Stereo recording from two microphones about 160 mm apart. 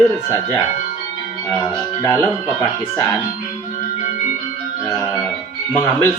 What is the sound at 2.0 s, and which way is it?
Speech, 15° left (ahead or behind).